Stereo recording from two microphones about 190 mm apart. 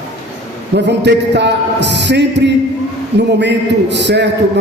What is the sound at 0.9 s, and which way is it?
A man's voice, 65° right (ahead or behind).